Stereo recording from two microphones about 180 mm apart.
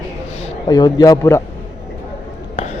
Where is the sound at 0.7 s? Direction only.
20° left (ahead or behind).